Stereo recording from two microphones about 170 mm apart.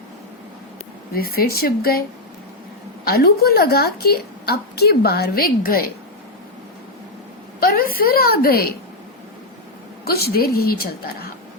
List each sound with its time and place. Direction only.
1.1 s a woman's voice: 60° left (ahead or behind)
7.6 s a woman's voice: 60° left (ahead or behind)
10.0 s a woman's voice: 65° left (ahead or behind)